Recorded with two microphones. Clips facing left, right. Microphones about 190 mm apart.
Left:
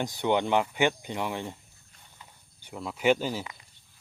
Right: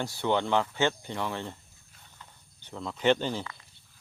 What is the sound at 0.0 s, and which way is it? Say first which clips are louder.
Speech: left 2 dB; 15° left (ahead or behind).